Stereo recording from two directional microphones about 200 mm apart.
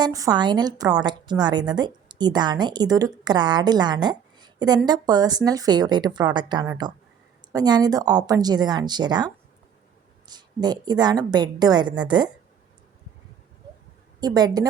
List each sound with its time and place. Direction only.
0.0 s a woman's voice: 20° right (ahead or behind)
14.2 s a woman's voice: 20° right (ahead or behind)